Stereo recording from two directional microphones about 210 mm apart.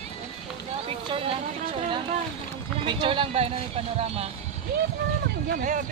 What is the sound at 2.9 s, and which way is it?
Speech, 25° right (ahead or behind).